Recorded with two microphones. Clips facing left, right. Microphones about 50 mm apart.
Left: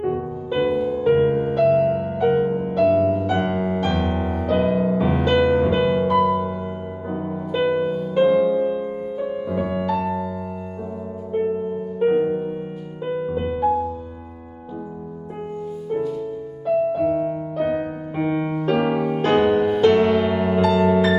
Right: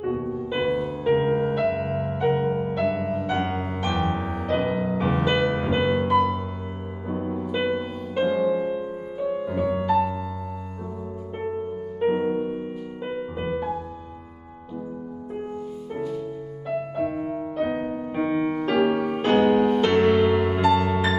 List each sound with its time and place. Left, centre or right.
0.0 s music: centre
12.0 s music: centre
12.3 s music: centre
16.6 s music: centre